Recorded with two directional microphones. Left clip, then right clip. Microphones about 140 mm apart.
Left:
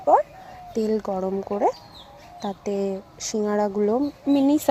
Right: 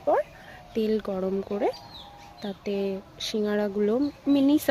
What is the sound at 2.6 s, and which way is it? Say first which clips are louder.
Speech: left 3 dB; 50° left (ahead or behind).